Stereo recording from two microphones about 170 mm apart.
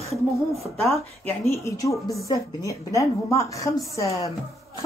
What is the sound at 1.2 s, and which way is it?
Speech, 15° left (ahead or behind).